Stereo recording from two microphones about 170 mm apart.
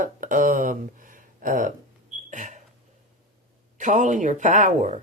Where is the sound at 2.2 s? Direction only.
45° right (ahead or behind).